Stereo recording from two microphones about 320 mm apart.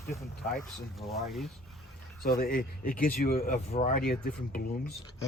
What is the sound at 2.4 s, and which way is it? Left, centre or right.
Speech, left.